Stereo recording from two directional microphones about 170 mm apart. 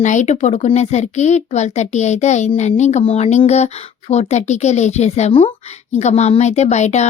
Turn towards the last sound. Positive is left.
turn(degrees=40)  # may be behind; listen again after turning